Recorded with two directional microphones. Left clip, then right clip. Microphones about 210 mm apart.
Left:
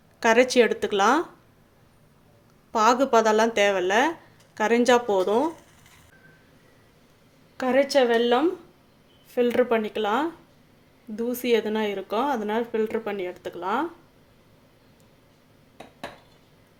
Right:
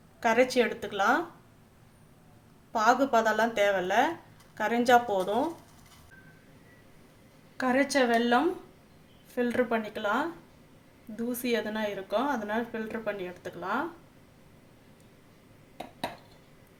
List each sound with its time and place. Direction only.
0.2 s a woman's voice: 40° left (ahead or behind)
2.7 s a woman's voice: 35° left (ahead or behind)
7.5 s a woman's voice: 40° left (ahead or behind)